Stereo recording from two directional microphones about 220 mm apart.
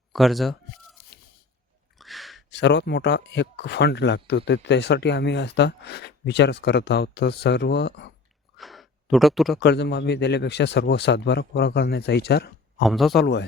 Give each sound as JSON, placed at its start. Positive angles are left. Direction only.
{"t": 0.1, "sound": "speech", "side_deg": 0}
{"t": 2.0, "sound": "a sound", "side_deg": 0}
{"t": 2.5, "sound": "speech", "side_deg": 50}
{"t": 8.5, "sound": "gasp", "side_deg": 0}
{"t": 9.6, "sound": "speech", "side_deg": 50}
{"t": 12.8, "sound": "speech", "side_deg": 0}
{"t": 13.1, "sound": "speech", "side_deg": 50}